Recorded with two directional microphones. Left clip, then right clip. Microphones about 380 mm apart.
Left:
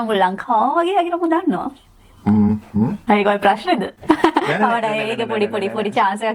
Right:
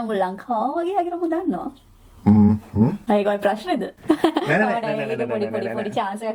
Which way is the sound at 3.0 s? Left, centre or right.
Left.